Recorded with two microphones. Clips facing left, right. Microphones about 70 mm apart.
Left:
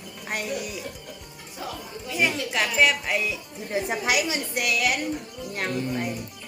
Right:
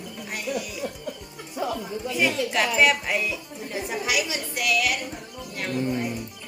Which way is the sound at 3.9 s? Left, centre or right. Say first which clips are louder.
Even; left.